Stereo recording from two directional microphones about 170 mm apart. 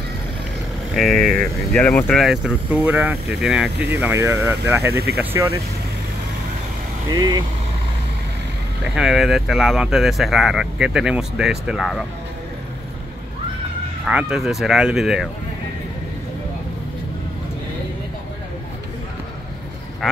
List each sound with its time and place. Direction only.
0.9 s speech: 5° left (ahead or behind)
3.9 s speech: 15° right (ahead or behind)
7.1 s speech: 25° right (ahead or behind)
8.9 s speech: centre (ahead or behind)
14.0 s speech: 5° right (ahead or behind)